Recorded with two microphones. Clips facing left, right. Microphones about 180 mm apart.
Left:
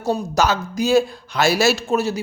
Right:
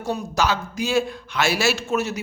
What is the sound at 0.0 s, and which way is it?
A man's voice, 40° left (ahead or behind).